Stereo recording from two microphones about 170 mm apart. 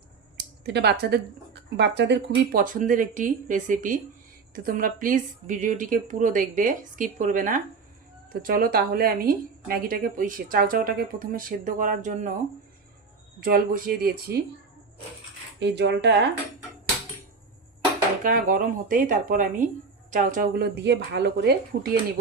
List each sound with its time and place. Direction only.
0.3 s speech: 85° right
1.7 s a woman's voice: 90° right; by 12.3 s 50° right (ahead or behind)
13.4 s a woman's voice: 55° right (ahead or behind)
15.5 s speech: 90° right
18.2 s a woman's voice: 55° right (ahead or behind)
20.6 s speech: 90° right